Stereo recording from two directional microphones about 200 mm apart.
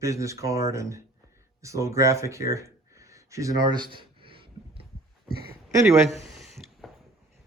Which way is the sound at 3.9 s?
25° right (ahead or behind).